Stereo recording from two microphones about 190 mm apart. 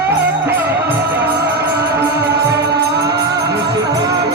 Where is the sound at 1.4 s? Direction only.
55° right (ahead or behind).